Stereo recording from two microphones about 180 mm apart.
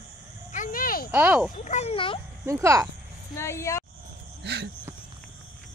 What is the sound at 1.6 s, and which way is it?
Speech, 40° left (ahead or behind).